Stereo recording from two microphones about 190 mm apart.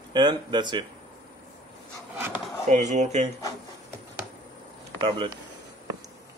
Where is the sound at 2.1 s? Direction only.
10° right (ahead or behind).